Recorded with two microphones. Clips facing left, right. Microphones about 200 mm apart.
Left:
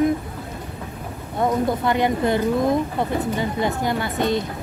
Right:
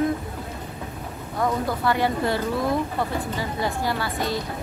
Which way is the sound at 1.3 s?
20° left (ahead or behind).